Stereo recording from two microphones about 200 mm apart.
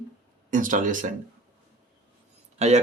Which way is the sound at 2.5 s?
35° right (ahead or behind).